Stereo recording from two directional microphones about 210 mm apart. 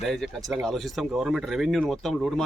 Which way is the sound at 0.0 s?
Centre (ahead or behind).